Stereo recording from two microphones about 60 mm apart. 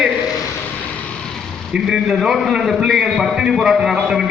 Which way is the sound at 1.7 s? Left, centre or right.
Centre.